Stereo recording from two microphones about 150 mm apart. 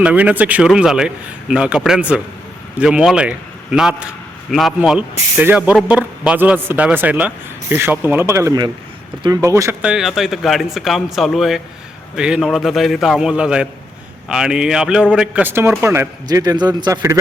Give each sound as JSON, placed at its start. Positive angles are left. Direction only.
{"t": 0.0, "sound": "a man's voice", "side_deg": -10}
{"t": 9.8, "sound": "a man's voice", "side_deg": -5}